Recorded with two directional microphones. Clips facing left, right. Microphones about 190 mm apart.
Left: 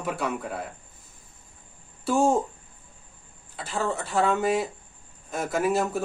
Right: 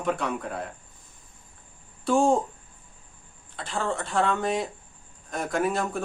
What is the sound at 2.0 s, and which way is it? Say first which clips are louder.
Speech: even; 5° left (ahead or behind).